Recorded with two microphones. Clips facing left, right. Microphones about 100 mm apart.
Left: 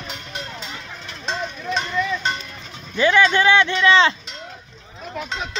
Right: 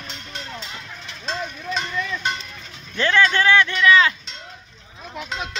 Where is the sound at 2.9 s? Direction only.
15° left (ahead or behind).